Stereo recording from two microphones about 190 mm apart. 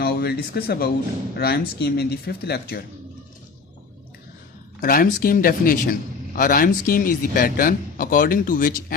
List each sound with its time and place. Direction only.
0.0 s speech: 55° left (ahead or behind)
4.8 s a man's voice: 50° left (ahead or behind)